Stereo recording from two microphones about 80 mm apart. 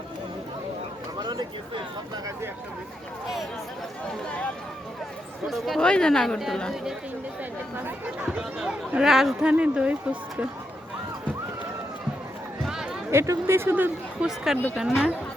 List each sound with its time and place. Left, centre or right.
1.2 s a sound: right
5.5 s speech: centre
7.8 s speech: right; by 9.5 s centre
9.5 s speech: centre
12.6 s a sound: centre
13.1 s speech: right
14.2 s speech: centre